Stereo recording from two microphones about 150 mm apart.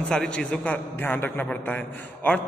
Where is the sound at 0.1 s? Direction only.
5° left (ahead or behind).